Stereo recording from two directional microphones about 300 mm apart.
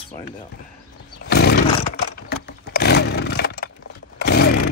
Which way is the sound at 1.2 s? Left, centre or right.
Left.